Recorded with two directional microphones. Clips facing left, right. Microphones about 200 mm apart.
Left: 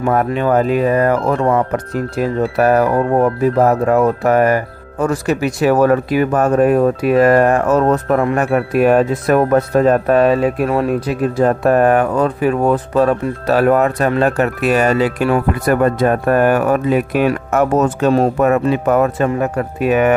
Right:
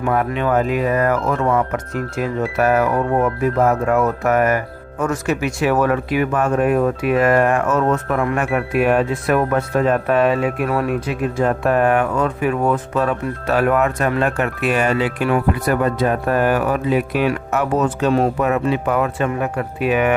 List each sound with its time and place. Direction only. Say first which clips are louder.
0.0 s speech: left 4 dB; 40° left (ahead or behind)